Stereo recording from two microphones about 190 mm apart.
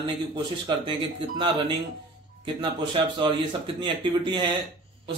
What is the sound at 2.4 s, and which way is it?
A man's voice, 25° right (ahead or behind).